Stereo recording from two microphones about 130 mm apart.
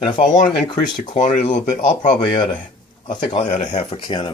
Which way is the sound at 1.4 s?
65° left (ahead or behind).